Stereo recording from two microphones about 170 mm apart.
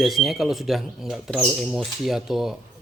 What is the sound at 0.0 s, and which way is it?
Speech, centre (ahead or behind).